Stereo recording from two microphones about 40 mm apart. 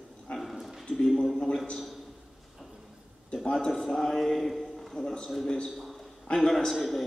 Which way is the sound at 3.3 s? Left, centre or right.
Centre.